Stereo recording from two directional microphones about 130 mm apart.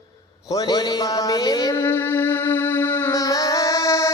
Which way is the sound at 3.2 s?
25° left (ahead or behind).